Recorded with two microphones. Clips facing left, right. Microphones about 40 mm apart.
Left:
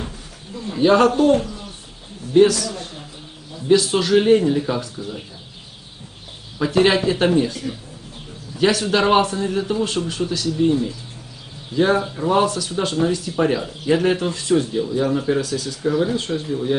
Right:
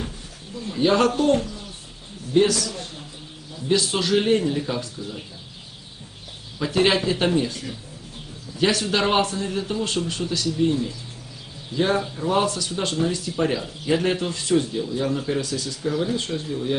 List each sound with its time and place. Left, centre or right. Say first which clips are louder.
0.5 s bird: left 3 dB; centre
0.8 s a man's voice: left 5 dB; centre
5.0 s speech: left 3 dB; centre
6.6 s a man's voice: left 4 dB; centre
12.0 s speech: left 4 dB; centre
12.3 s a man's voice: left 4 dB; centre
15.3 s a man's voice: left 5 dB; centre
15.8 s speech: left 5 dB; centre